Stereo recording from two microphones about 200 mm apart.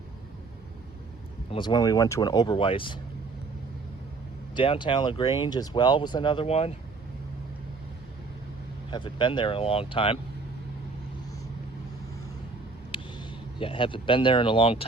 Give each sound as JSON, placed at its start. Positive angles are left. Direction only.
{"t": 1.5, "sound": "speech", "side_deg": 25}
{"t": 4.5, "sound": "speech", "side_deg": 25}
{"t": 8.9, "sound": "speech", "side_deg": 25}
{"t": 12.9, "sound": "speech", "side_deg": 25}